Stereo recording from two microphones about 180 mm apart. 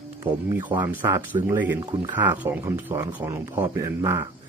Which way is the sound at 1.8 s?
25° right (ahead or behind).